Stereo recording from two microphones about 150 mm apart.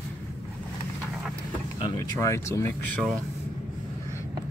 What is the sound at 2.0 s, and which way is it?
Speech, 20° left (ahead or behind).